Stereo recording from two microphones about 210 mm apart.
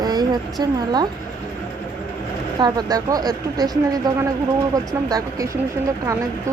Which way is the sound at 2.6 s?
20° right (ahead or behind).